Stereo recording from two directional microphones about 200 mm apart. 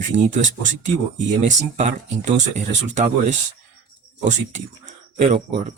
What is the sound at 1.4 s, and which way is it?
Speech, 35° right (ahead or behind).